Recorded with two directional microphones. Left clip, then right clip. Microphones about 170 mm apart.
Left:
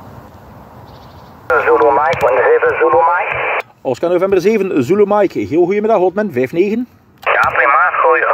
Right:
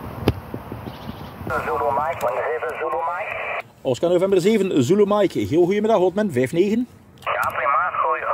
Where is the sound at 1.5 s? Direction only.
70° left (ahead or behind).